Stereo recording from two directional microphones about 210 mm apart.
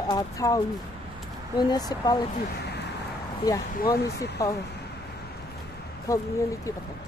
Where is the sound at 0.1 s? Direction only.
15° left (ahead or behind).